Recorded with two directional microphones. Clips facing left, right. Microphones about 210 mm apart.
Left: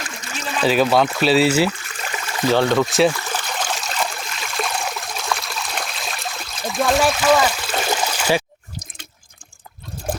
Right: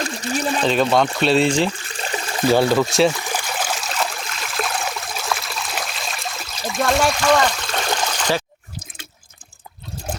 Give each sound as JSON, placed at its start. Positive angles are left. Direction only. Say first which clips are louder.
{"t": 0.0, "sound": "speech", "louder": "right 8 dB", "side_deg": -35}
{"t": 0.6, "sound": "speech", "louder": "left 3 dB", "side_deg": 5}
{"t": 1.8, "sound": "a sound", "louder": "right 3 dB", "side_deg": -30}
{"t": 2.5, "sound": "speech", "louder": "right 1 dB", "side_deg": -10}
{"t": 3.1, "sound": "stream", "louder": "even", "side_deg": -10}